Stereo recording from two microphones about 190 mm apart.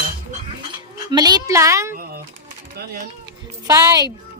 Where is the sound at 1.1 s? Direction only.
20° right (ahead or behind).